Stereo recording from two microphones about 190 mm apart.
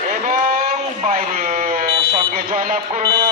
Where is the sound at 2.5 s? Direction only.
40° right (ahead or behind).